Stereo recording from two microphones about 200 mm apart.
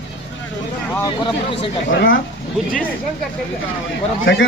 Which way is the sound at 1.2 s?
25° left (ahead or behind).